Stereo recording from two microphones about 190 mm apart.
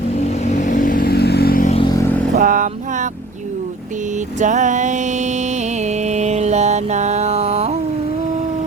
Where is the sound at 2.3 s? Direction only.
45° right (ahead or behind).